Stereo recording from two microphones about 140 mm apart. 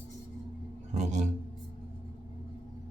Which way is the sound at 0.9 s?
55° right (ahead or behind).